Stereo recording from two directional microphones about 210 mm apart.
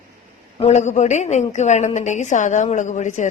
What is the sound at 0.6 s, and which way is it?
A woman's voice, 35° left (ahead or behind).